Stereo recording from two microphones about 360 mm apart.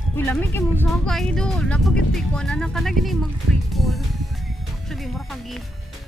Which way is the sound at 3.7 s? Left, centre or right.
Centre.